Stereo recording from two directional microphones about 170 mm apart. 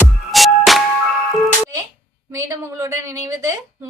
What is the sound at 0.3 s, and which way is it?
Music, centre (ahead or behind).